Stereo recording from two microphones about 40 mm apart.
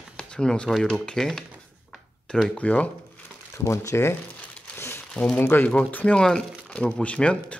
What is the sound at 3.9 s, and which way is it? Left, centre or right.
Speech, left.